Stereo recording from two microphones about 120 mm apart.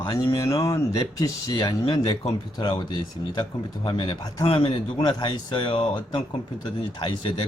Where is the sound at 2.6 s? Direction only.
40° left (ahead or behind).